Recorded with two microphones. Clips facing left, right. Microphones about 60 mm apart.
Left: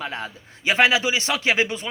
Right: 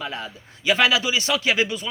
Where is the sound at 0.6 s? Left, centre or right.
Left.